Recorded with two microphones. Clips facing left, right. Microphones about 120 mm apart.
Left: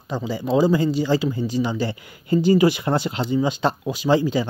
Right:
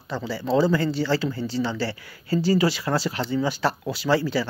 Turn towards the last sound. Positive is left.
turn(degrees=20)  # may be behind; listen again after turning